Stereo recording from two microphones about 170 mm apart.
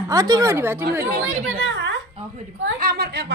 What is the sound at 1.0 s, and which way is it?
Speech, 55° right (ahead or behind).